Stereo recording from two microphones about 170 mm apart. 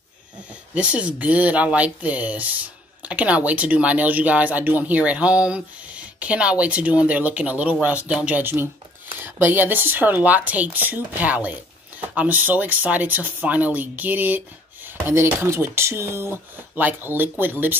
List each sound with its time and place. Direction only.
0.7 s speech: 5° right (ahead or behind)